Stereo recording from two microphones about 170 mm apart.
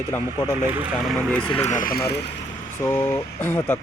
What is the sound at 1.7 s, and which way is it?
Speech, 55° left (ahead or behind).